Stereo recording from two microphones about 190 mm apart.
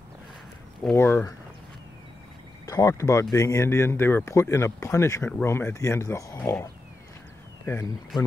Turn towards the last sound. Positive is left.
turn(degrees=15)  # may be behind; listen again after turning